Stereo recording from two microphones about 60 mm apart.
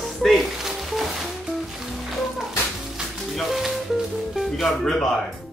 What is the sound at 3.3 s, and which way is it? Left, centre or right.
Music, centre.